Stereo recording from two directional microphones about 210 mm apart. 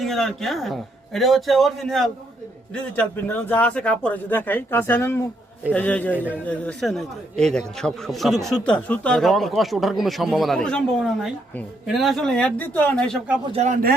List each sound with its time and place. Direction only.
0.0 s a man's voice: centre (ahead or behind)
13.5 s a man's voice: 30° right (ahead or behind)